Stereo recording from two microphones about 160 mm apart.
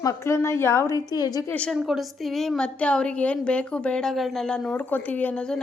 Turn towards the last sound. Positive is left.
turn(degrees=5)  # may be behind; listen again after turning